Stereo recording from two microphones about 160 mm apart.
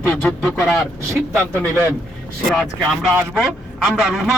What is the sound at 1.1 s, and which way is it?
Speech, 15° right (ahead or behind).